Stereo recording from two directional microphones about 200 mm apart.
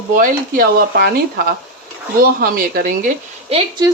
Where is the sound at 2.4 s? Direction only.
45° right (ahead or behind).